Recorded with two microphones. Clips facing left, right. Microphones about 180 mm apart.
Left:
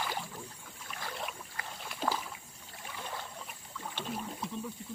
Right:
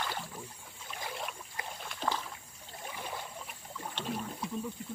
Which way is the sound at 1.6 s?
15° right (ahead or behind).